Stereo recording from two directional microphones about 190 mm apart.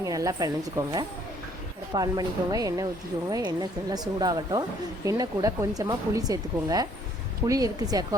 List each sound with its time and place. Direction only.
0.0 s a woman's voice: 20° right (ahead or behind)